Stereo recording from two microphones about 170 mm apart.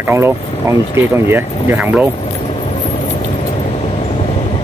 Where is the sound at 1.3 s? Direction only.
15° right (ahead or behind).